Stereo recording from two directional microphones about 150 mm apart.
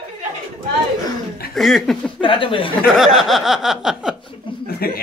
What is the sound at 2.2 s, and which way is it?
Speech, 35° left (ahead or behind).